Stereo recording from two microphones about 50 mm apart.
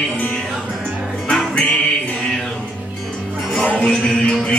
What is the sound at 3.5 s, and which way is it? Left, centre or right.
Music, centre.